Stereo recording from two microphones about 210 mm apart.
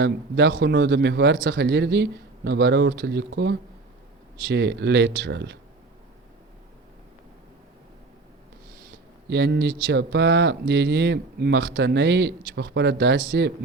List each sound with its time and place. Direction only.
0.0 s speech: 55° right (ahead or behind)
9.3 s speech: 50° right (ahead or behind)